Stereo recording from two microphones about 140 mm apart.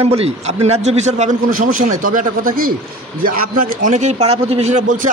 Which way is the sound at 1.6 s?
70° right (ahead or behind).